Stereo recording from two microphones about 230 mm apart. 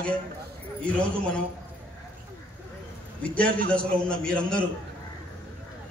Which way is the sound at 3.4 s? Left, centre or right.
Right.